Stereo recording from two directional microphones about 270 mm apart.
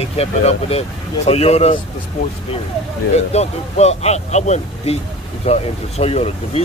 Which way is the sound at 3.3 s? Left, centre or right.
Left.